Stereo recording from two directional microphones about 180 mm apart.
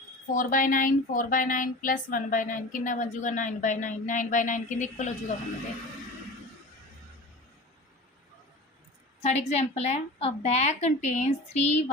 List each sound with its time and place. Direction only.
0.3 s speech: 50° left (ahead or behind)
9.2 s a woman's voice: 35° left (ahead or behind)